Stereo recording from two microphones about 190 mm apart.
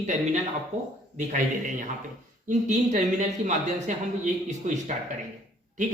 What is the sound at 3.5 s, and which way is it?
Speech, 40° right (ahead or behind).